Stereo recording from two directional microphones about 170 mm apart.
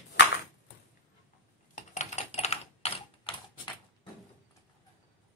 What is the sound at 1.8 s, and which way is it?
Typing, 45° left (ahead or behind).